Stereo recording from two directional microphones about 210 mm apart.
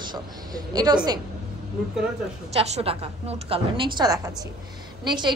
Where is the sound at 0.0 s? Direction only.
20° right (ahead or behind).